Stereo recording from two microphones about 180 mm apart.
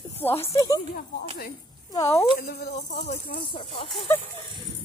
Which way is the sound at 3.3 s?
50° left (ahead or behind).